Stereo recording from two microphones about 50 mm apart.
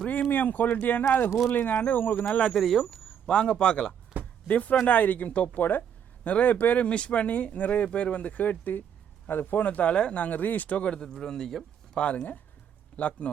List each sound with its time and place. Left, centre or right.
0.1 s speech: left
2.2 s speech: centre
2.9 s speech: centre
4.4 s speech: left
9.6 s speech: left
11.1 s a man's voice: centre
11.9 s speech: left